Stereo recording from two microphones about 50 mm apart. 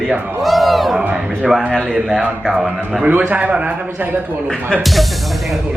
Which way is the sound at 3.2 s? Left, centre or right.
Right.